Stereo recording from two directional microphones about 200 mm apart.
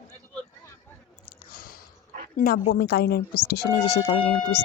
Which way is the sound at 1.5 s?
45° left (ahead or behind).